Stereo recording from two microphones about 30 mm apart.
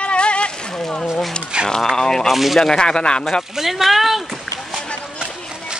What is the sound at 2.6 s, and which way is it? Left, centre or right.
Speech, left.